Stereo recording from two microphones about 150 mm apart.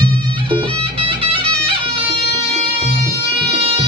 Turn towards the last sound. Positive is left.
turn(degrees=-40)  # may be behind; listen again after turning